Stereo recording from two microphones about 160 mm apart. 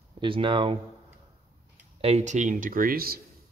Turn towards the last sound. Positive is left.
turn(degrees=-70)  # may be behind; listen again after turning